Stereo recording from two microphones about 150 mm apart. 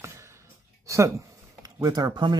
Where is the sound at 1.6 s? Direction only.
25° right (ahead or behind).